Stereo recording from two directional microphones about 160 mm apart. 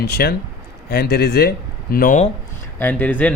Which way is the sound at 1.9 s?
55° left (ahead or behind).